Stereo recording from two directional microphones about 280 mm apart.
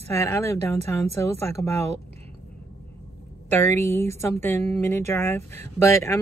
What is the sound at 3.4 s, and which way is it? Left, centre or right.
Speech, centre.